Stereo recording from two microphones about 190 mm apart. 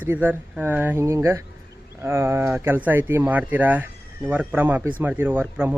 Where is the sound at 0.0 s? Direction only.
10° right (ahead or behind).